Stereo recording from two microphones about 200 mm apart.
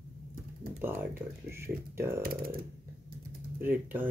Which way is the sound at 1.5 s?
10° right (ahead or behind).